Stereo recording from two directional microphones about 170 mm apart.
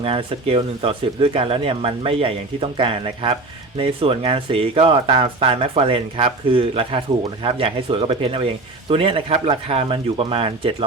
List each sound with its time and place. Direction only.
0.0 s speech: 30° right (ahead or behind)